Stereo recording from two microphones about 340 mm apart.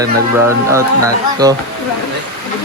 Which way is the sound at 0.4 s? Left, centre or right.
Centre.